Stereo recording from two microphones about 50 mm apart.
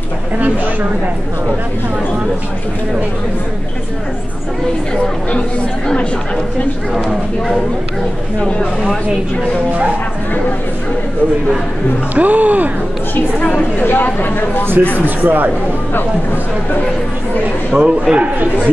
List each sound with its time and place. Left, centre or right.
6.9 s speech: centre
8.4 s a woman's voice: left
12.2 s speech: right
13.4 s a woman's voice: left
13.8 s speech: left
15.0 s speech: right
17.7 s a man's voice: right